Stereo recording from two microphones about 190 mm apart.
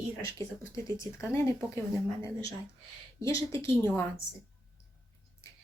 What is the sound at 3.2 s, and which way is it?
Speech, 15° left (ahead or behind).